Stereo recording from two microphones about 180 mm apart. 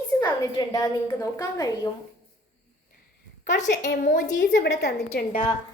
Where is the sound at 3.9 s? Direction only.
55° left (ahead or behind).